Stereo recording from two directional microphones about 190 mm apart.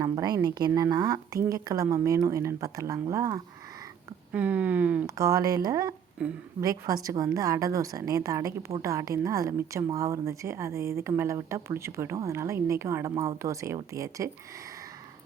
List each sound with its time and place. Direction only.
0.0 s a woman's voice: 20° right (ahead or behind)